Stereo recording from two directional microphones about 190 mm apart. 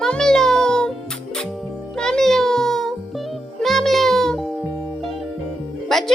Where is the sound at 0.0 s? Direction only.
5° left (ahead or behind).